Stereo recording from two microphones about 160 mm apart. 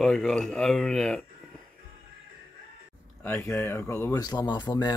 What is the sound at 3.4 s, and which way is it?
Speech, 15° left (ahead or behind).